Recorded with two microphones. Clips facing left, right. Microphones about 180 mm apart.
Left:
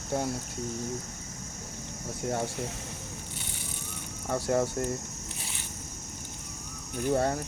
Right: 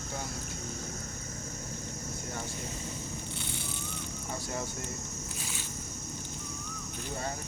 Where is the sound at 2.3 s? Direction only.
70° left (ahead or behind).